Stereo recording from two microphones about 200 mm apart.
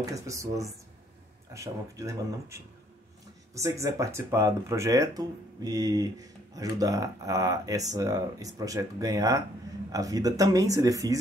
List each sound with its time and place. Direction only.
0.1 s speech: 15° right (ahead or behind)
3.8 s speech: 15° right (ahead or behind)